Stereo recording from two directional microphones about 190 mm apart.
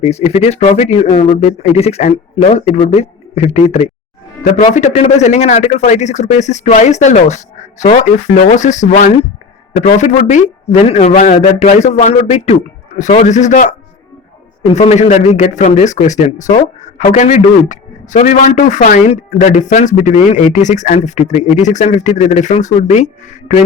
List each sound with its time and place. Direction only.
0.0 s speech: 35° left (ahead or behind)